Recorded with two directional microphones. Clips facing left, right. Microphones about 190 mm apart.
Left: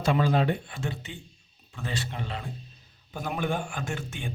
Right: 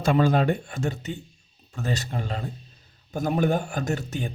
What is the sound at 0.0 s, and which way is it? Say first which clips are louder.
Speech: right 3 dB; 50° right (ahead or behind).